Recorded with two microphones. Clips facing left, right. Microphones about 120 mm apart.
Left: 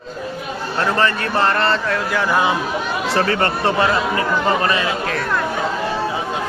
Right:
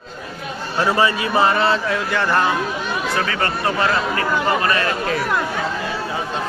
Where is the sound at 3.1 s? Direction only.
35° left (ahead or behind).